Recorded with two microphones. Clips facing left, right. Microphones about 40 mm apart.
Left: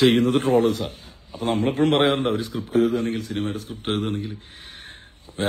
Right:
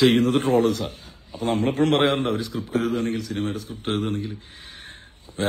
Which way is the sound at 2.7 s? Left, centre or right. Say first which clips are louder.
Left 4 dB; right.